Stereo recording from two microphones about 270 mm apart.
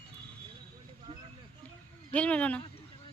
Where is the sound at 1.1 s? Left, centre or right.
Right.